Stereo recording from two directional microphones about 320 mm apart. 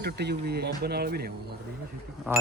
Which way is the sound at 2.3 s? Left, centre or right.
Centre.